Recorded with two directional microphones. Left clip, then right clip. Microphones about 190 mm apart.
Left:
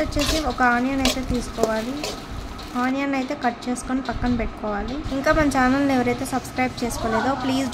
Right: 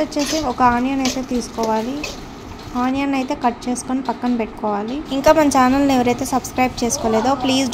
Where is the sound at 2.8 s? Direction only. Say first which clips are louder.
Right 3 dB; 15° right (ahead or behind).